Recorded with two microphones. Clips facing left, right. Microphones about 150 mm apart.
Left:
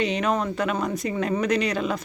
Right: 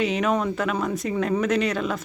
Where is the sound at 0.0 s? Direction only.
5° right (ahead or behind).